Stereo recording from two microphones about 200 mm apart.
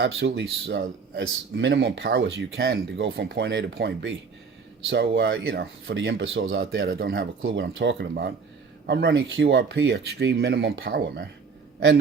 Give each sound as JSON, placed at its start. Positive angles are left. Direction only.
{"t": 0.0, "sound": "speech", "side_deg": -60}